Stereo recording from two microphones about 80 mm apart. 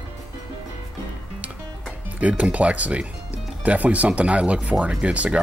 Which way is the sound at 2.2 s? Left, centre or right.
Centre.